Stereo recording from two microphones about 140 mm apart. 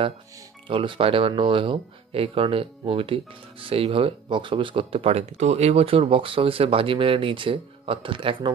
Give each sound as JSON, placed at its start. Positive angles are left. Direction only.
{"t": 0.7, "sound": "speech", "side_deg": -35}